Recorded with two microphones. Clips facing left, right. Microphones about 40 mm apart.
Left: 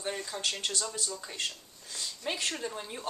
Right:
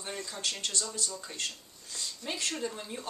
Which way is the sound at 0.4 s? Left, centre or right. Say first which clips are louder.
Right 1 dB; left.